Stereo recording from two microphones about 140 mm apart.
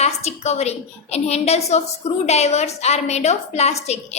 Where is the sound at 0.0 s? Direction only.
50° left (ahead or behind).